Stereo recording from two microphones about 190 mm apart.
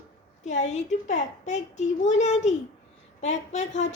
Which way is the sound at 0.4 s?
40° left (ahead or behind).